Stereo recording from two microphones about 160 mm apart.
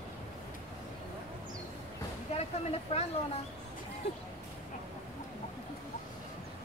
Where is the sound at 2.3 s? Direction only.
40° left (ahead or behind).